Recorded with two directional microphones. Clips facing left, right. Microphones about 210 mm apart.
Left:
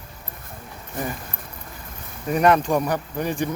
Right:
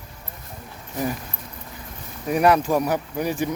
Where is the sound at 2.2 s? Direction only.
5° right (ahead or behind).